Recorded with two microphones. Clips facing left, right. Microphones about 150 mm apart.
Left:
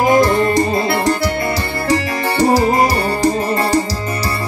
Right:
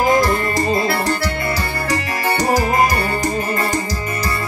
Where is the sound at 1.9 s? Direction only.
30° left (ahead or behind).